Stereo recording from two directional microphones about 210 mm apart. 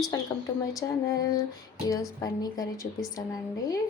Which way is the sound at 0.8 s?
15° left (ahead or behind).